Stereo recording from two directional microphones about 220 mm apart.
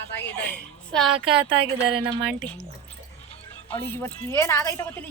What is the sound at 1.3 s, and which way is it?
Speech, 25° right (ahead or behind).